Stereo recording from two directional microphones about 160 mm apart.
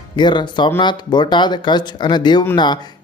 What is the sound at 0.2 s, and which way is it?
Speech, 30° left (ahead or behind).